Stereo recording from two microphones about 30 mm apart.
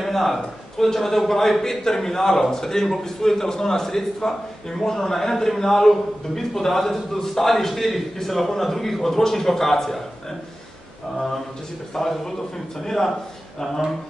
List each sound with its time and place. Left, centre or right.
0.0 s a man's voice: centre
11.9 s a man's voice: centre